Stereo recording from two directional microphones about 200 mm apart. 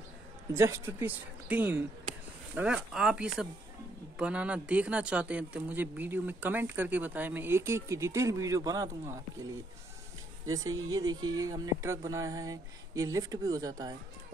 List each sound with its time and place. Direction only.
0.5 s speech: 15° right (ahead or behind)
10.4 s speech: 20° right (ahead or behind)